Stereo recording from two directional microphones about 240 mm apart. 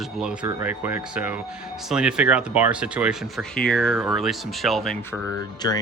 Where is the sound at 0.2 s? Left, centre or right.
Centre.